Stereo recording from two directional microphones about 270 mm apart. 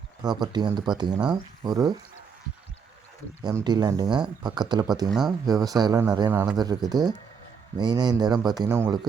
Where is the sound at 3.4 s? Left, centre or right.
Centre.